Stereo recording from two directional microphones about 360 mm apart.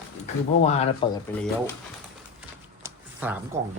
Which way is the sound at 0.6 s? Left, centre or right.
Centre.